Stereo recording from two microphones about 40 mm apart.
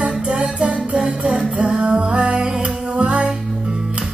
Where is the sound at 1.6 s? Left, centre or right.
Right.